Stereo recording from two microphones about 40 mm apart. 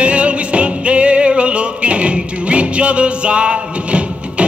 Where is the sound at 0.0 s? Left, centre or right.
Right.